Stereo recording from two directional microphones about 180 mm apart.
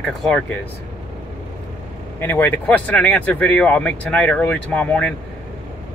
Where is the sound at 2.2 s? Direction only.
10° left (ahead or behind).